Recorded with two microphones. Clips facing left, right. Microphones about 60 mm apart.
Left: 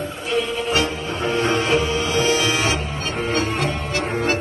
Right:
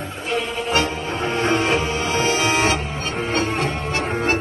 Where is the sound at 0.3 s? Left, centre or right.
Right.